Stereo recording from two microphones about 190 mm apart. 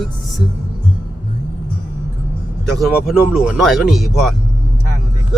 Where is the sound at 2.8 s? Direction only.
5° right (ahead or behind).